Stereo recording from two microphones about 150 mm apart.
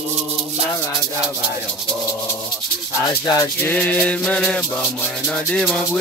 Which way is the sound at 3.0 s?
25° left (ahead or behind).